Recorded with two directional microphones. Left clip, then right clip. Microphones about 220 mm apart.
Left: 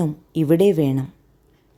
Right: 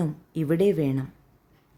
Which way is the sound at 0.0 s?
10° left (ahead or behind).